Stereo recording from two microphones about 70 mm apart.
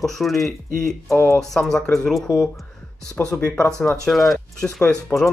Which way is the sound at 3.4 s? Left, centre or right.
Left.